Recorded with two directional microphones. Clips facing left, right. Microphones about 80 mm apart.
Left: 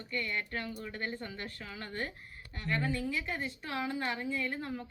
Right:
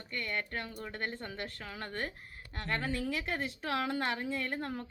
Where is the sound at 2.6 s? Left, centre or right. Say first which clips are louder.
Left 1 dB; right.